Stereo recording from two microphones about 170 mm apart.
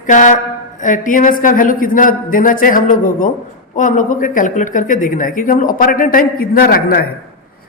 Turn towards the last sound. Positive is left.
turn(degrees=60)  # may be behind; listen again after turning